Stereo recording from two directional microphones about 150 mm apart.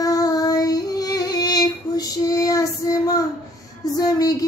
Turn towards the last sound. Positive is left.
turn(degrees=25)  # may be behind; listen again after turning